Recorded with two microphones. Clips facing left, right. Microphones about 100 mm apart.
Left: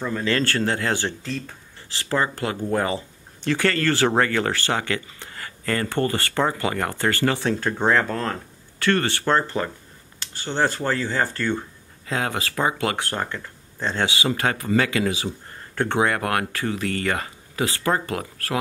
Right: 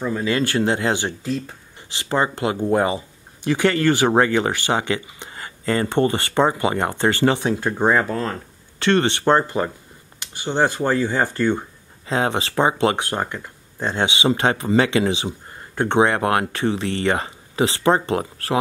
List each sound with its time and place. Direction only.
0.0 s speech: 10° right (ahead or behind)
8.7 s speech: 20° right (ahead or behind)